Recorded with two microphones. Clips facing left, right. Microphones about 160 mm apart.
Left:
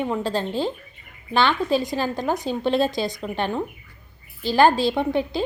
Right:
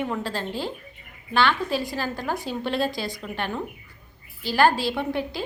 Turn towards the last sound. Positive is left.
turn(degrees=20)  # may be behind; listen again after turning